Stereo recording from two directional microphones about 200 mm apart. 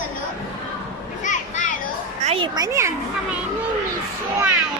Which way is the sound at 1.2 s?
40° left (ahead or behind).